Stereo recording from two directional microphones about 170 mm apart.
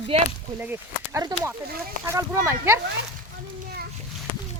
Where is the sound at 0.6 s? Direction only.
10° right (ahead or behind).